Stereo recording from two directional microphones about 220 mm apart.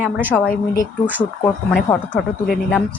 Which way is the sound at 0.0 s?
10° right (ahead or behind).